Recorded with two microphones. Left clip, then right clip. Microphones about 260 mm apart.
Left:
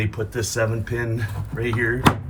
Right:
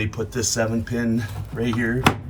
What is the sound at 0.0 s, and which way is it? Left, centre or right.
Speech, centre.